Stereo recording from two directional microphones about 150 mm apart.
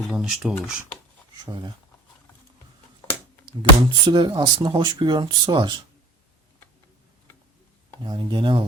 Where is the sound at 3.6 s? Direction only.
30° right (ahead or behind).